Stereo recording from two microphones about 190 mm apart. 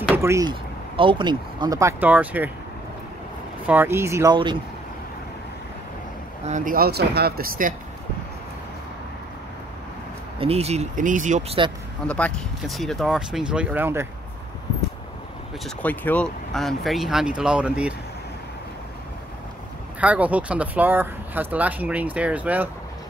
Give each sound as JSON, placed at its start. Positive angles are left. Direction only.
{"t": 0.1, "sound": "speech", "side_deg": -15}
{"t": 3.6, "sound": "speech", "side_deg": -10}
{"t": 6.4, "sound": "speech", "side_deg": -40}
{"t": 10.4, "sound": "speech", "side_deg": -35}
{"t": 12.1, "sound": "speech", "side_deg": 5}
{"t": 15.6, "sound": "speech", "side_deg": 10}
{"t": 20.0, "sound": "speech", "side_deg": -5}